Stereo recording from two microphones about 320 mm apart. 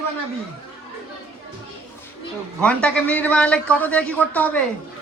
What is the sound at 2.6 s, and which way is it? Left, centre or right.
A man's voice, centre.